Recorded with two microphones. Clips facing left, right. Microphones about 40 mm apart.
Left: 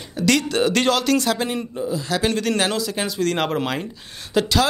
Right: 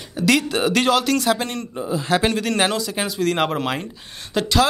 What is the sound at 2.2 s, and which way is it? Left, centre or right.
Speech, centre.